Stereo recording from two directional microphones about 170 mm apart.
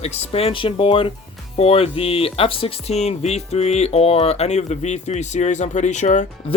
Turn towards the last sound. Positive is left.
turn(degrees=45)  # may be behind; listen again after turning